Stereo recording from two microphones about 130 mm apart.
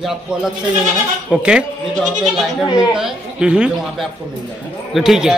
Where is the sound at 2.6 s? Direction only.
30° left (ahead or behind).